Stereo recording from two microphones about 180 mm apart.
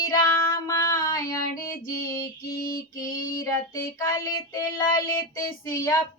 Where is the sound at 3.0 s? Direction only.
15° left (ahead or behind).